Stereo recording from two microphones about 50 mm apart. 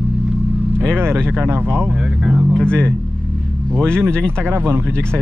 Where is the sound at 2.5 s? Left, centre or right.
Centre.